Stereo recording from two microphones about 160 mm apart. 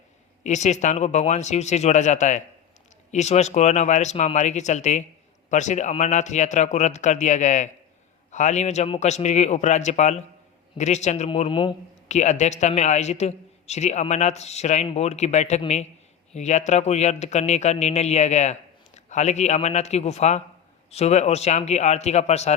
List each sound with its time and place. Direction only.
0.4 s a man's voice: 45° left (ahead or behind)
11.3 s speech: 30° left (ahead or behind)
12.0 s a man's voice: 45° left (ahead or behind)